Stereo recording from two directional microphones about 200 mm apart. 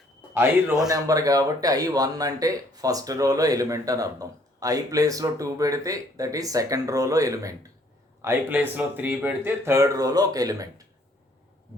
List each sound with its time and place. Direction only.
0.3 s a man's voice: 5° right (ahead or behind)
0.9 s speech: 15° right (ahead or behind)